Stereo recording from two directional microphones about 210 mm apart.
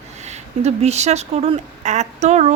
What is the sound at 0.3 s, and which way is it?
Speech, 30° right (ahead or behind).